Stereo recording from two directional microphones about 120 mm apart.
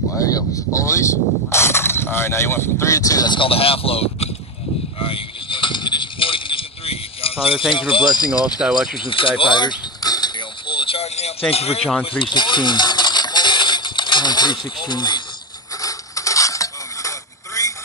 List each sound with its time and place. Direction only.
0.7 s speech: 25° left (ahead or behind)
3.3 s speech: 50° left (ahead or behind)
5.0 s a sound: 45° left (ahead or behind)
7.9 s speech: 40° left (ahead or behind)
8.5 s speech: 5° right (ahead or behind)
8.9 s a sound: 45° left (ahead or behind)
11.5 s speech: 60° left (ahead or behind)
12.1 s coin: 45° left (ahead or behind)
15.8 s a sound: 30° left (ahead or behind)
17.6 s vehicle: 25° left (ahead or behind)